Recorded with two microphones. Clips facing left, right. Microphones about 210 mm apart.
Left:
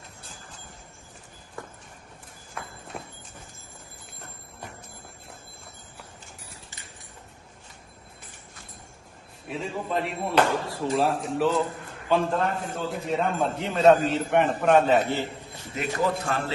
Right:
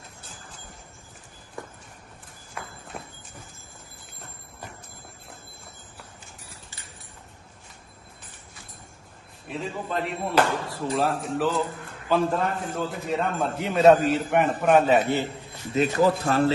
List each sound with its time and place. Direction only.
2.6 s clip-clop: centre (ahead or behind)
9.5 s a man's voice: centre (ahead or behind)
15.7 s speech: 35° right (ahead or behind)